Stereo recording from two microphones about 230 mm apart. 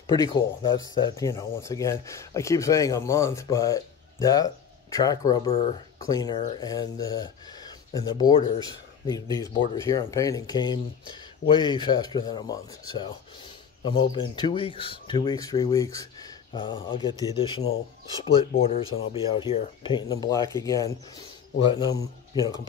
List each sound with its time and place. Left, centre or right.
0.0 s speech: centre